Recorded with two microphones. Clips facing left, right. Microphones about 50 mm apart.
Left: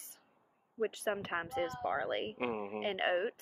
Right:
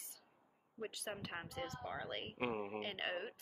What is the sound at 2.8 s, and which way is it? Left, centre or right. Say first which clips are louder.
Speech: left 9 dB; left.